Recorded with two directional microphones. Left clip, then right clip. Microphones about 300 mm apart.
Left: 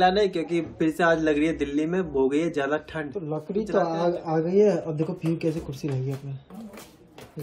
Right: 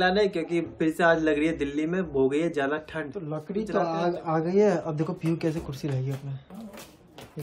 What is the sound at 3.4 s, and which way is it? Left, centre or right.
A man's voice, centre.